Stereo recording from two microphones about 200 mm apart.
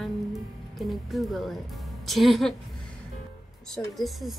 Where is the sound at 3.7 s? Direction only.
Centre (ahead or behind).